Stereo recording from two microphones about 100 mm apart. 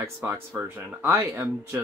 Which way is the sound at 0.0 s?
30° right (ahead or behind).